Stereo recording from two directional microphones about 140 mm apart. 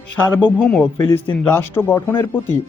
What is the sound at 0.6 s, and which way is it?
Speech, 5° left (ahead or behind).